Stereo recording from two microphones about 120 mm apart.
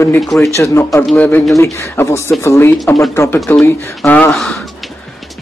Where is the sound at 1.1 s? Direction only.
15° left (ahead or behind).